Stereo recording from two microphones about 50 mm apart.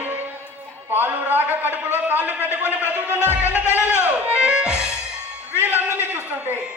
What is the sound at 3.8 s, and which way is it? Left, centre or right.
Music, right.